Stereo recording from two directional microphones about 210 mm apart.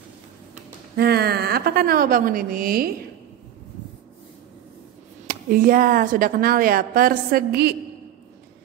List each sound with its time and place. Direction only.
0.9 s a woman's voice: 50° right (ahead or behind)
5.2 s a woman's voice: 40° right (ahead or behind)